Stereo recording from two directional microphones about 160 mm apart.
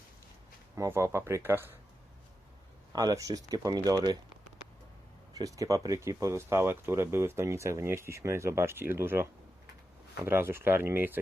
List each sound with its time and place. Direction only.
0.8 s speech: 15° right (ahead or behind)
2.9 s speech: 25° right (ahead or behind)
5.3 s speech: 20° right (ahead or behind)
10.2 s speech: 15° right (ahead or behind)